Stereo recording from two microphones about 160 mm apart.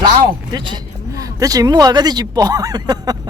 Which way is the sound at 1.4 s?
25° right (ahead or behind).